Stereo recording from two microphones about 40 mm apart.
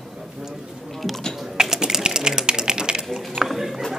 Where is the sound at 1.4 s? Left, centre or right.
Centre.